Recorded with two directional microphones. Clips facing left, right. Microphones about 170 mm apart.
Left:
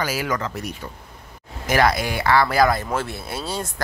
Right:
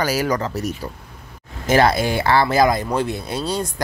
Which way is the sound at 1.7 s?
25° right (ahead or behind).